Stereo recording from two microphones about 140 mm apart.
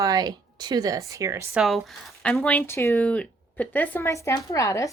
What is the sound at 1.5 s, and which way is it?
Speech, centre (ahead or behind).